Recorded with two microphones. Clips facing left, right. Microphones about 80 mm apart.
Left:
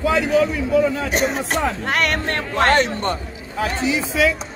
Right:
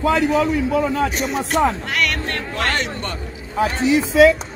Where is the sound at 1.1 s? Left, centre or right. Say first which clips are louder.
Left 1 dB; left.